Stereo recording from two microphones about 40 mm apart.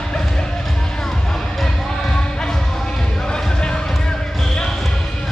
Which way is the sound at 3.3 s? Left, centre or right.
Left.